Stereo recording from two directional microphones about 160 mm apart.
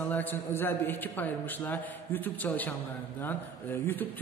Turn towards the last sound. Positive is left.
turn(degrees=15)  # may be behind; listen again after turning